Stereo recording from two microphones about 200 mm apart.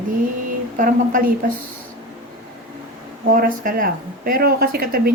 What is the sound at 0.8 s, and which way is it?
Speech, 40° right (ahead or behind).